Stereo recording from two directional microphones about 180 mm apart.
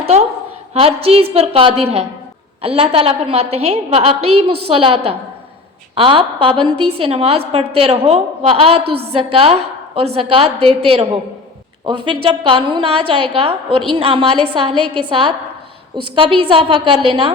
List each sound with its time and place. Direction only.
0.7 s a woman's voice: 35° right (ahead or behind)